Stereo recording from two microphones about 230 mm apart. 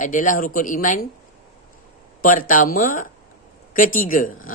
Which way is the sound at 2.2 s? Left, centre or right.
Left.